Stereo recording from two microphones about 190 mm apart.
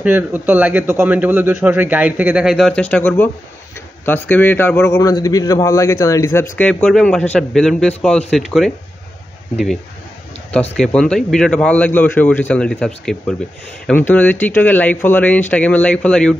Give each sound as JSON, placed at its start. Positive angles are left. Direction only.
{"t": 0.0, "sound": "a man's voice", "side_deg": -10}
{"t": 10.8, "sound": "a man's voice", "side_deg": 5}